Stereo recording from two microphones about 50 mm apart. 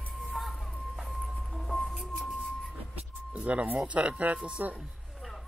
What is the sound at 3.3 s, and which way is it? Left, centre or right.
Speech, right.